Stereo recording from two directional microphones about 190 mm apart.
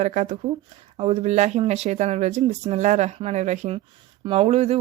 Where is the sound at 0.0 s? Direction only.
40° right (ahead or behind).